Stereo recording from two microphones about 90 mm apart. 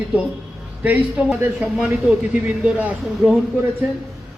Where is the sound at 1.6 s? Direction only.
5° right (ahead or behind).